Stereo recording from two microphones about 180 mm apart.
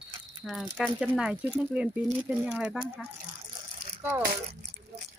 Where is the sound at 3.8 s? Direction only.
40° right (ahead or behind).